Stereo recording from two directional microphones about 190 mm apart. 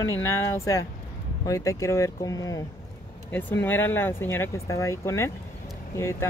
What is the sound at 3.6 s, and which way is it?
Speech, 10° left (ahead or behind).